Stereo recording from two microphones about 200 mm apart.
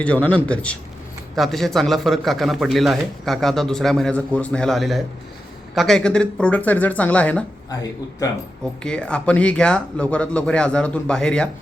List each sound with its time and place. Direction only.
0.0 s speech: 5° left (ahead or behind)
7.7 s speech: 20° left (ahead or behind)
8.8 s speech: 5° left (ahead or behind)